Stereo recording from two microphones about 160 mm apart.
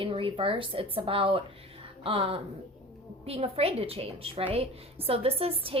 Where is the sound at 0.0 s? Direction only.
35° right (ahead or behind).